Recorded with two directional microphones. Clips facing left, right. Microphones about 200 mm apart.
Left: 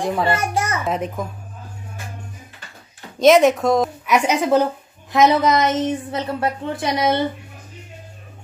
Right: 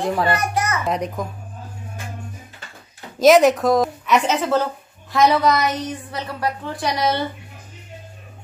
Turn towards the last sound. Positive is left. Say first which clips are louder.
# left 2 dB
turn(degrees=20)  # may be behind; listen again after turning